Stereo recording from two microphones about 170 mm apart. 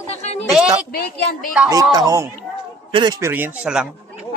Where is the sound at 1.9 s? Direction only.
20° right (ahead or behind).